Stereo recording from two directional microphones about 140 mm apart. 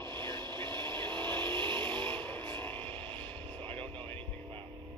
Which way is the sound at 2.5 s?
15° left (ahead or behind).